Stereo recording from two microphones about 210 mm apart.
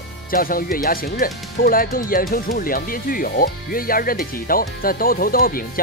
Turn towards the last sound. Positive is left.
turn(degrees=45)  # may be behind; listen again after turning